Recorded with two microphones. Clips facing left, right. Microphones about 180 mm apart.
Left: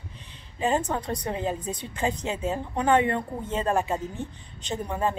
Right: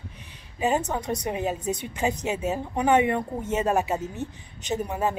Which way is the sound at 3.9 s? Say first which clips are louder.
Right 1 dB; 20° right (ahead or behind).